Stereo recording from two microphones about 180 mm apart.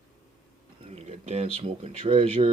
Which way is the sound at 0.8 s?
35° right (ahead or behind).